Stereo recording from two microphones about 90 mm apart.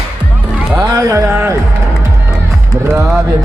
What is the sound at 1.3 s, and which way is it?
Music, 25° right (ahead or behind).